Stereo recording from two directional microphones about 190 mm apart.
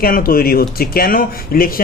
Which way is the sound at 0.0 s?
50° left (ahead or behind).